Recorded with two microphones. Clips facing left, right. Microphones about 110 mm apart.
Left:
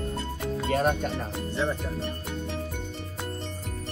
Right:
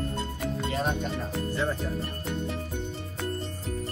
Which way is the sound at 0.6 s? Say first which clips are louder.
Left 5 dB; 50° left (ahead or behind).